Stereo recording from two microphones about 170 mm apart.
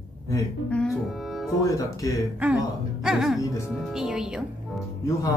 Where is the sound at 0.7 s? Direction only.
5° left (ahead or behind).